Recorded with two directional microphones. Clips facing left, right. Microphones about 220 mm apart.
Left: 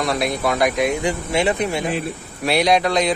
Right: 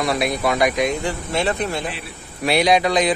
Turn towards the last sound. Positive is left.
turn(degrees=0)  # may be behind; listen again after turning